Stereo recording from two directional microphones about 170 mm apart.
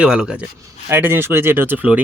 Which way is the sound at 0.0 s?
5° right (ahead or behind).